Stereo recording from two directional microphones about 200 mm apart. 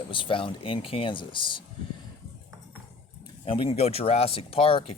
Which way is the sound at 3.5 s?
25° left (ahead or behind).